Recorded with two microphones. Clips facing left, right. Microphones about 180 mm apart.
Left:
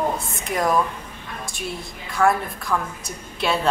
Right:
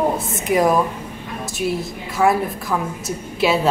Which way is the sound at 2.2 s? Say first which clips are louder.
Right 3 dB; 5° right (ahead or behind).